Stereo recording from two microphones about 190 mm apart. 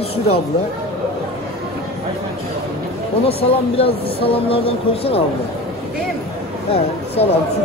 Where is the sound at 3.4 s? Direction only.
30° left (ahead or behind).